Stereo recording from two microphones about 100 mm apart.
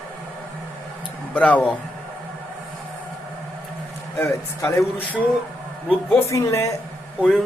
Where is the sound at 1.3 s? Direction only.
15° left (ahead or behind).